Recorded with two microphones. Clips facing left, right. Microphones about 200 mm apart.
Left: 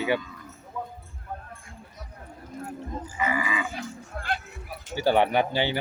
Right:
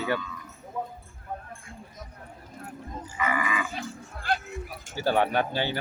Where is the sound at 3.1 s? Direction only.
25° left (ahead or behind).